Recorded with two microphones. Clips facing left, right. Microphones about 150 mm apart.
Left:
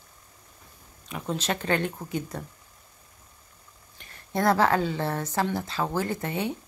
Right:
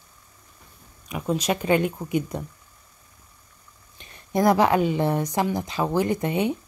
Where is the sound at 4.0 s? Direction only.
20° right (ahead or behind).